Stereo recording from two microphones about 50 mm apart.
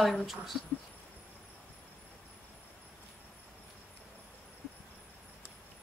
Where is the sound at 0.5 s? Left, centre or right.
Left.